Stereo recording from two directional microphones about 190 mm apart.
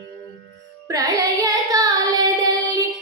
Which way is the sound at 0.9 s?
20° right (ahead or behind).